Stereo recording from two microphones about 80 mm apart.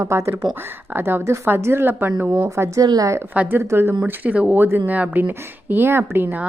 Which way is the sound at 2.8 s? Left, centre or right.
Right.